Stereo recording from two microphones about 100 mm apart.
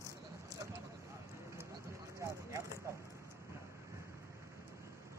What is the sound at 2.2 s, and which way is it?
Vehicle, 30° right (ahead or behind).